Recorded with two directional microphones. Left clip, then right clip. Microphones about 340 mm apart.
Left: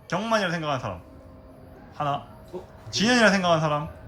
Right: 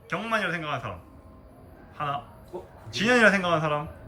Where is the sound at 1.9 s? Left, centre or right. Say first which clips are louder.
Left 3 dB; centre.